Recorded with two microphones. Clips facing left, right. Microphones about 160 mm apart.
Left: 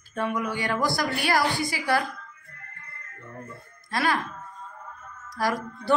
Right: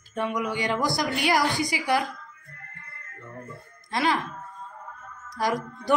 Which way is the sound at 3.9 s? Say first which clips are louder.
Right 1 dB; 20° right (ahead or behind).